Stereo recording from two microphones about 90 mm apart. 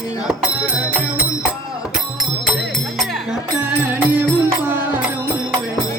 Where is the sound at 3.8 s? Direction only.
20° right (ahead or behind).